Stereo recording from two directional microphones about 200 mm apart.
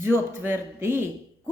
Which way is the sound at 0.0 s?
10° right (ahead or behind).